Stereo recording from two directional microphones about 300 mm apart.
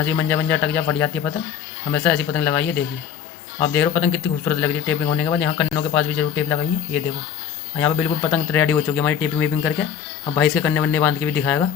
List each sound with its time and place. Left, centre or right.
0.0 s speech: centre